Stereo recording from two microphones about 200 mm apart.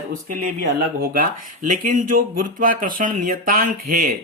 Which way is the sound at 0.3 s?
40° right (ahead or behind).